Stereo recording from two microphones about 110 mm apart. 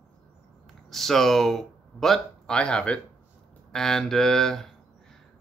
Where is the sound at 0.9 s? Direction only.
Centre (ahead or behind).